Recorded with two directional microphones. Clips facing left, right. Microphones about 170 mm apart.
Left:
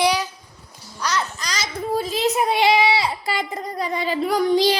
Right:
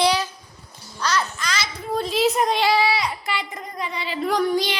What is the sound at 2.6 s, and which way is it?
Speech, 20° left (ahead or behind).